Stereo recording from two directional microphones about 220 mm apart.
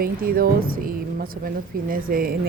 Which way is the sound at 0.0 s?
40° right (ahead or behind).